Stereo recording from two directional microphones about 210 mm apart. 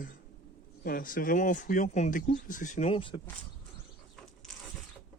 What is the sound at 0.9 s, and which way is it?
Speech, 45° left (ahead or behind).